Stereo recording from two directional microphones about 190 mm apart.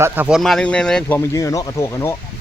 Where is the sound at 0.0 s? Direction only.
5° right (ahead or behind); by 2.1 s 15° left (ahead or behind).